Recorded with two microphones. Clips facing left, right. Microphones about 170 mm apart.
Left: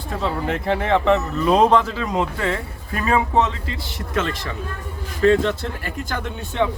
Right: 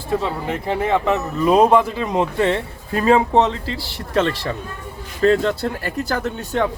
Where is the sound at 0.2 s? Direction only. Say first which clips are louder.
Left 1 dB; 5° right (ahead or behind).